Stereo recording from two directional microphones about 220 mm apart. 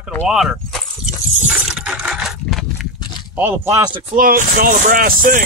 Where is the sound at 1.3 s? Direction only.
5° right (ahead or behind).